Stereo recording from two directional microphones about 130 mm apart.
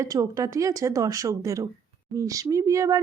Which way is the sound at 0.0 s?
25° right (ahead or behind).